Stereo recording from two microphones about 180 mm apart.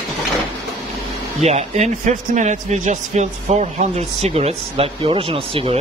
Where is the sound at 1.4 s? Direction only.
35° right (ahead or behind).